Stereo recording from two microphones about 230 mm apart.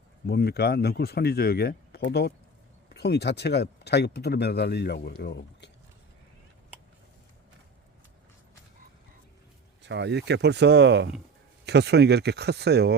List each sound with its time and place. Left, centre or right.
0.3 s speech: left
9.8 s speech: right